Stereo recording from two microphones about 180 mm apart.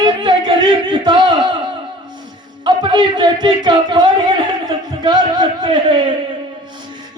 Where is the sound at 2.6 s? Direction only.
25° right (ahead or behind).